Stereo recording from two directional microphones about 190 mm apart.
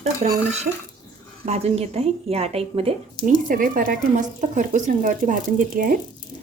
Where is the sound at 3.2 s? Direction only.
25° left (ahead or behind).